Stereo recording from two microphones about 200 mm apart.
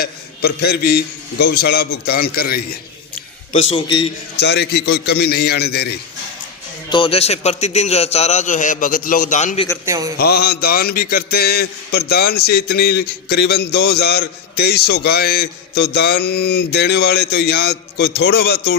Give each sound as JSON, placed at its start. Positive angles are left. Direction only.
{"t": 0.0, "sound": "a man's voice", "side_deg": 55}
{"t": 3.5, "sound": "a man's voice", "side_deg": 35}
{"t": 3.8, "sound": "a man's voice", "side_deg": 20}
{"t": 4.4, "sound": "a man's voice", "side_deg": 55}
{"t": 6.9, "sound": "a man's voice", "side_deg": 25}
{"t": 9.8, "sound": "a man's voice", "side_deg": -15}
{"t": 10.2, "sound": "a man's voice", "side_deg": 50}